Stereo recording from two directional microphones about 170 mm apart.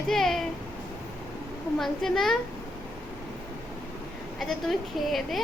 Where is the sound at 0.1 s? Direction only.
Centre (ahead or behind).